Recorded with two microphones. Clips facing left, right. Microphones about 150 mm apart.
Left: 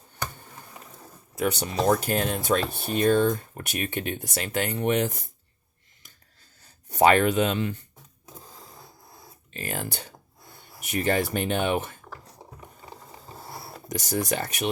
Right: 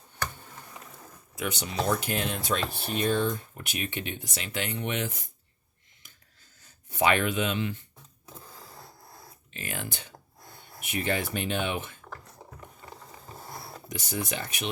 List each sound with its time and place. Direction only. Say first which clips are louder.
1.4 s speech: left 5 dB; 40° left (ahead or behind)
6.9 s speech: left 6 dB; 40° left (ahead or behind)
9.5 s speech: left 5 dB; 40° left (ahead or behind)
12.1 s a sound: left 1 dB; 20° left (ahead or behind)
13.5 s a sound: left 2 dB; centre (ahead or behind)
13.8 s speech: left 6 dB; 40° left (ahead or behind)